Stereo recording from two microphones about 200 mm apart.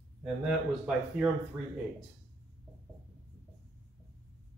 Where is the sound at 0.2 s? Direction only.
5° right (ahead or behind).